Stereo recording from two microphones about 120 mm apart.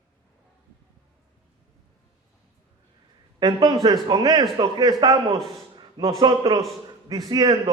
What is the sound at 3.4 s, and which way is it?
Speech, 35° right (ahead or behind).